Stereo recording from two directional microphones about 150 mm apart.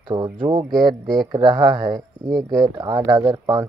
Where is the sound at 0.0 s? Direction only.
30° right (ahead or behind).